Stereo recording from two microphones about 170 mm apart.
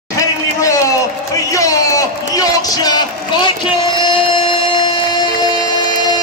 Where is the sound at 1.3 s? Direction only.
20° left (ahead or behind).